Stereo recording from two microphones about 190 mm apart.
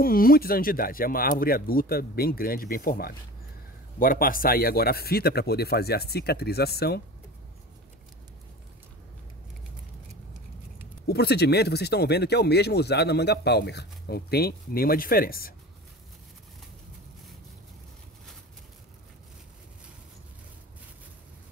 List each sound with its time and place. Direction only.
0.0 s speech: 50° left (ahead or behind)
11.1 s speech: 60° left (ahead or behind)